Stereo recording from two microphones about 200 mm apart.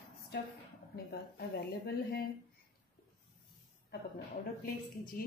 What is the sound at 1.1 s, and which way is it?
A woman's voice, 50° left (ahead or behind).